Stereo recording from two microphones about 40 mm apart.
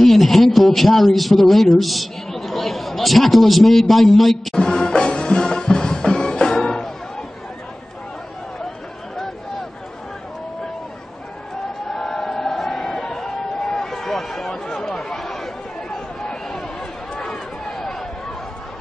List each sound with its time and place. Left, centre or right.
0.0 s a man's voice: centre
4.6 s music: centre
8.6 s a sound: centre
11.9 s chant: centre
14.8 s chatter: centre
17.1 s a sound: centre